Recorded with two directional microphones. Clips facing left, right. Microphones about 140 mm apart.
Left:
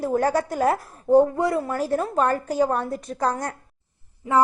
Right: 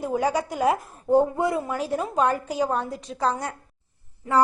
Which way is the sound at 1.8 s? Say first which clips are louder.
Left 2 dB; 10° right (ahead or behind).